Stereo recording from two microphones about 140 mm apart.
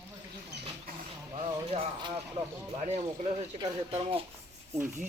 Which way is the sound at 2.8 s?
50° right (ahead or behind).